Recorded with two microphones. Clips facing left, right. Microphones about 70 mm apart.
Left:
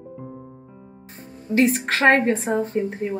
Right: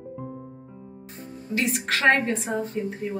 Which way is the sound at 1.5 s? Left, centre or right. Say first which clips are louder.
Left 7 dB; left.